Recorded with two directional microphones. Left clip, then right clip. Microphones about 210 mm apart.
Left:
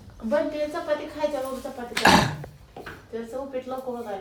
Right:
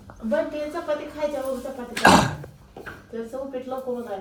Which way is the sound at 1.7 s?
5° left (ahead or behind).